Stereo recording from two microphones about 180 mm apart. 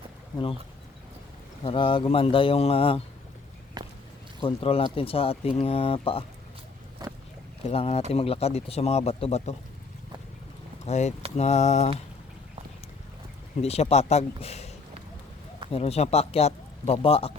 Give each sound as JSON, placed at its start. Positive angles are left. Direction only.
{"t": 1.6, "sound": "speech", "side_deg": 30}
{"t": 3.8, "sound": "walk", "side_deg": -20}
{"t": 4.4, "sound": "speech", "side_deg": 30}
{"t": 7.0, "sound": "a sound", "side_deg": -20}
{"t": 7.6, "sound": "speech", "side_deg": 35}
{"t": 10.8, "sound": "speech", "side_deg": 40}
{"t": 13.6, "sound": "speech", "side_deg": 35}